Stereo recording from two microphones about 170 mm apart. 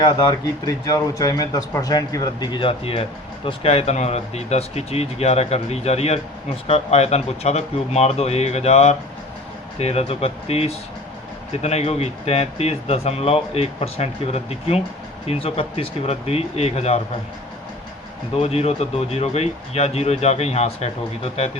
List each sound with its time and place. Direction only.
0.0 s a man's voice: 20° left (ahead or behind); by 17.0 s 35° left (ahead or behind)
18.3 s a man's voice: 40° left (ahead or behind)